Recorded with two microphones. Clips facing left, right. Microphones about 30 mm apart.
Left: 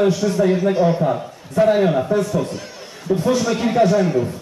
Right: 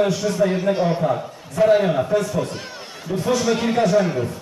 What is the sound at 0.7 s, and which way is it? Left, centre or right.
Speech, centre.